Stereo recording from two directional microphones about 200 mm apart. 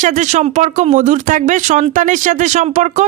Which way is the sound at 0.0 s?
40° right (ahead or behind).